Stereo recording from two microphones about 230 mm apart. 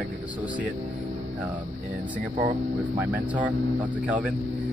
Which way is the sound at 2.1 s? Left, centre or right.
Right.